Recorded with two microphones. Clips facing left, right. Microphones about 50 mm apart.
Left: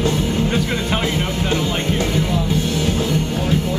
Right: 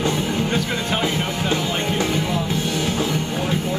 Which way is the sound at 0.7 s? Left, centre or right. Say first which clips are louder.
Left 2 dB; centre.